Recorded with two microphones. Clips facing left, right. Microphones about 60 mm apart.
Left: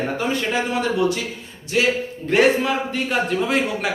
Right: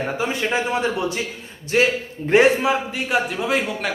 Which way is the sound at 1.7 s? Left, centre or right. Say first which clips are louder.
Right 2 dB; right.